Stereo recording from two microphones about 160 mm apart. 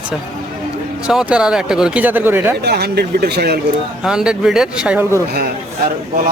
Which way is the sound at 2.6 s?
90° right.